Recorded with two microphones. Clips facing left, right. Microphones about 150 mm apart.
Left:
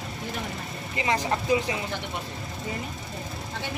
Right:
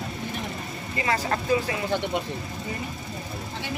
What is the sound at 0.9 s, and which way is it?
Speech, 20° left (ahead or behind).